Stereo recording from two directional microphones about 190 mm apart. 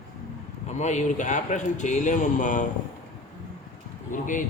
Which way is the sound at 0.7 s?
40° left (ahead or behind).